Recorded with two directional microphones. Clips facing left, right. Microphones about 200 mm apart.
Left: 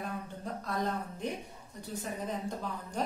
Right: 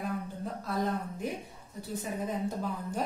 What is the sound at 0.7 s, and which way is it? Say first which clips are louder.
A woman's voice: right 2 dB; centre (ahead or behind).